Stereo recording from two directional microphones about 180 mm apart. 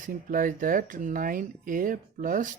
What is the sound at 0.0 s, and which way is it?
Speech, 50° right (ahead or behind).